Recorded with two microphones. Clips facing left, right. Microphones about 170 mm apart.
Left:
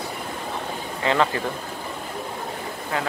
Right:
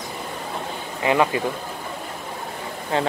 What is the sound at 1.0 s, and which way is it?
Speech, 15° right (ahead or behind).